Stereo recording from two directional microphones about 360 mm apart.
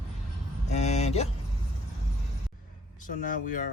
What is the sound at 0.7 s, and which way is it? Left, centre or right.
Speech, centre.